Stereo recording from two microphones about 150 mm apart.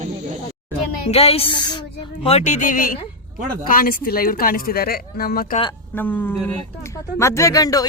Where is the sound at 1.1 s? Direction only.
45° left (ahead or behind).